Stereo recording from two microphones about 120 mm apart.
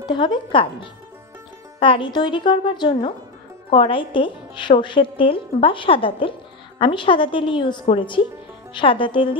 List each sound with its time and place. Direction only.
0.0 s a woman's voice: 40° left (ahead or behind)